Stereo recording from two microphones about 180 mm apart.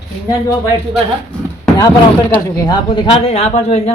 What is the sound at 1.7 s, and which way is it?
A man's voice, 20° left (ahead or behind).